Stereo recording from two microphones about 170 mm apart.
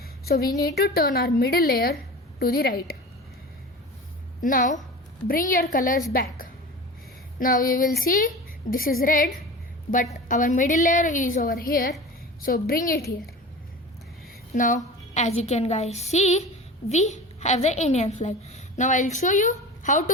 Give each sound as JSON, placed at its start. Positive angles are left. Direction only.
{"t": 0.3, "sound": "a woman's voice", "side_deg": 65}
{"t": 4.4, "sound": "a woman's voice", "side_deg": 55}
{"t": 14.5, "sound": "a woman's voice", "side_deg": 50}
{"t": 15.1, "sound": "a woman's voice", "side_deg": 40}